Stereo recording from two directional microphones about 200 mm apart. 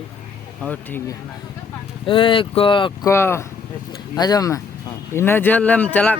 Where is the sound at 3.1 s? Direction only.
15° left (ahead or behind).